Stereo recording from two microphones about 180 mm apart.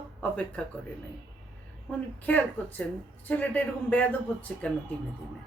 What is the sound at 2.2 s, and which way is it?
Speech, 10° left (ahead or behind).